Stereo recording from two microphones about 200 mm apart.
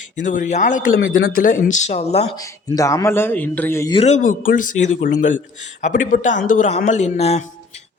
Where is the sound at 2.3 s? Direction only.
15° left (ahead or behind).